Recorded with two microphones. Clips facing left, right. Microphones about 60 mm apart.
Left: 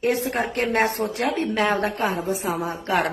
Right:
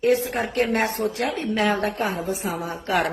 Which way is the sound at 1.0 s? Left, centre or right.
Left.